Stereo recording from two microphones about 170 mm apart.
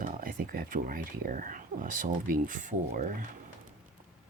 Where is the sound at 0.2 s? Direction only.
55° right (ahead or behind).